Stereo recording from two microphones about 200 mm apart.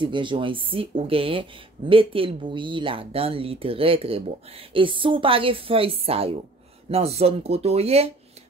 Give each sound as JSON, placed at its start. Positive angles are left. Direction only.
{"t": 0.0, "sound": "speech", "side_deg": -25}